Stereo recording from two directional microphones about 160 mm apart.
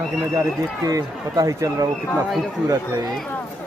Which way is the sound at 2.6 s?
20° right (ahead or behind).